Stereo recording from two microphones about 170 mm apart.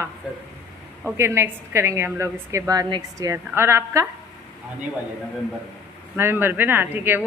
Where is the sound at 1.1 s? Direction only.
15° right (ahead or behind).